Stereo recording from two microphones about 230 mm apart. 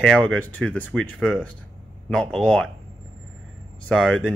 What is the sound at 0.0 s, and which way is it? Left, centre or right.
Speech, centre.